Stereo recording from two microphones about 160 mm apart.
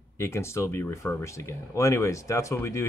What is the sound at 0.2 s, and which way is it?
Speech, 15° left (ahead or behind).